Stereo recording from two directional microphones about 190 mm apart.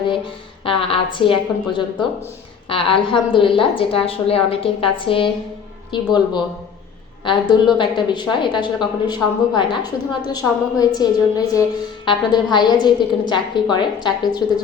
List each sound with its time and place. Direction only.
0.6 s a woman's voice: 30° left (ahead or behind)